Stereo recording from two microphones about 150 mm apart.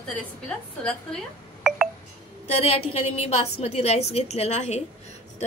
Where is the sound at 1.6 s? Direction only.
5° right (ahead or behind).